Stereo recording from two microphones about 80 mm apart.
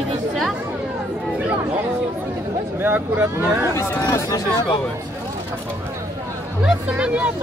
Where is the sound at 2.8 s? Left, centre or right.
Right.